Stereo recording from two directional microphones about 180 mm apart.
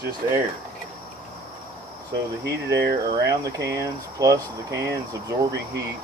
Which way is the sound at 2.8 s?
65° right (ahead or behind).